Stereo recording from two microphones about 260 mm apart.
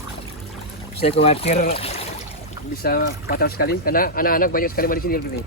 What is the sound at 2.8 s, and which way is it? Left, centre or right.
Speech, left.